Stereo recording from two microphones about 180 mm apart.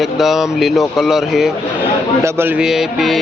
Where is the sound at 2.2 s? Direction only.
10° right (ahead or behind).